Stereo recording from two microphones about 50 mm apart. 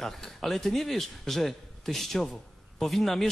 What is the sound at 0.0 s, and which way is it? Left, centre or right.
A man's voice, centre.